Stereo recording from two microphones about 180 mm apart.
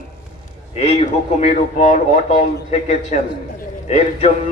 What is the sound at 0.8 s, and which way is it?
A man's voice, 35° left (ahead or behind).